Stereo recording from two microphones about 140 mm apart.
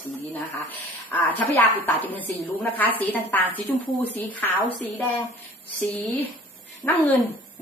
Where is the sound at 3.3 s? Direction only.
15° left (ahead or behind).